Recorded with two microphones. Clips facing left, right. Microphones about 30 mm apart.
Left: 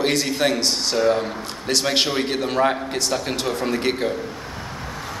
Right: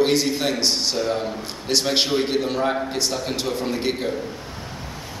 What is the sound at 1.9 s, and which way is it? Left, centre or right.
A man's voice, centre.